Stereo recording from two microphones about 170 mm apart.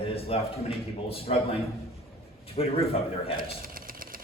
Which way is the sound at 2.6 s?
35° left (ahead or behind).